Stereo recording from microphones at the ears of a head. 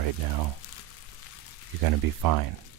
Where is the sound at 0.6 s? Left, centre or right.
Left.